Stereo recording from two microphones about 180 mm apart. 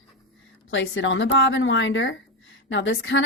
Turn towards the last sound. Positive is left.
turn(degrees=90)